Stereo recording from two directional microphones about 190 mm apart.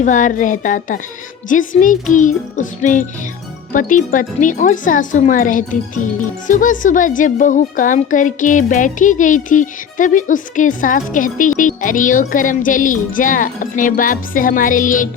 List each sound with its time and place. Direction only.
0.0 s speech: 45° left (ahead or behind)